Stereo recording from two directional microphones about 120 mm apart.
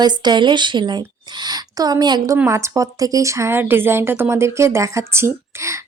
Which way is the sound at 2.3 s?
25° right (ahead or behind).